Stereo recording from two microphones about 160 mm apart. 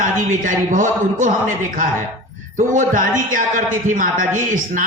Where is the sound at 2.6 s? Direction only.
55° right (ahead or behind).